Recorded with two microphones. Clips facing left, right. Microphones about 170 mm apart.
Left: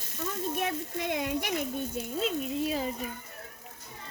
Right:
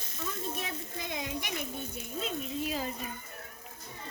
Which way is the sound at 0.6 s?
65° left (ahead or behind).